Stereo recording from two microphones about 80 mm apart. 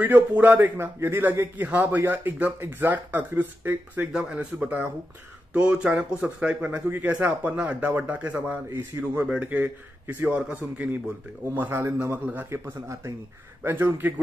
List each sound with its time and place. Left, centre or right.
0.0 s a man's voice: right
12.4 s speech: right
13.6 s speech: right